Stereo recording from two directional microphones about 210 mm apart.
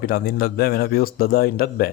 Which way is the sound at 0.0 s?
45° left (ahead or behind).